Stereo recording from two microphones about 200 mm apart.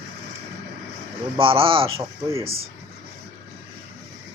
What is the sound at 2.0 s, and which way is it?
Speech, 15° right (ahead or behind).